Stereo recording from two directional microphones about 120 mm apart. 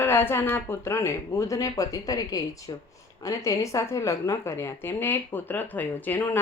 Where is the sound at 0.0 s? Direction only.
20° left (ahead or behind).